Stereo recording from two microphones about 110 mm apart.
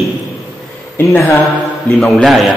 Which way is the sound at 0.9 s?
25° left (ahead or behind).